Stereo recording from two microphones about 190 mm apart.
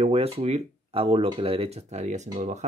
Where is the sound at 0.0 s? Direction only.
30° right (ahead or behind).